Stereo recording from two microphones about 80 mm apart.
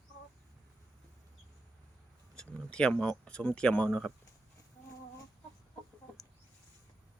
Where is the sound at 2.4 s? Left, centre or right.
Centre.